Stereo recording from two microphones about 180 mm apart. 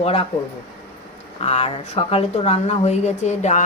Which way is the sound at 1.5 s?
35° left (ahead or behind).